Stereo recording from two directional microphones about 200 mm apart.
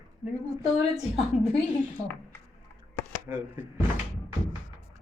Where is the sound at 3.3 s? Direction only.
10° right (ahead or behind).